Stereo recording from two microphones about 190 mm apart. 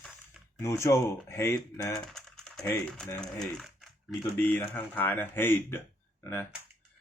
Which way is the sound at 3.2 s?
Centre (ahead or behind).